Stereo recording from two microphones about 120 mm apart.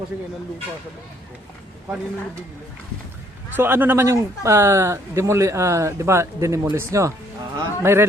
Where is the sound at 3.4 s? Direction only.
15° right (ahead or behind).